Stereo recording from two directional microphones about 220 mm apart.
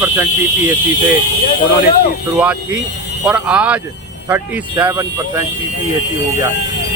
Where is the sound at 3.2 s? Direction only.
5° right (ahead or behind).